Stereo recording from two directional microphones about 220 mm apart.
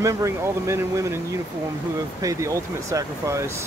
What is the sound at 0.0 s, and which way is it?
Speech, 15° right (ahead or behind).